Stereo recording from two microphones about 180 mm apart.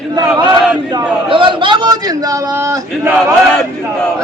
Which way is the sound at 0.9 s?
30° right (ahead or behind).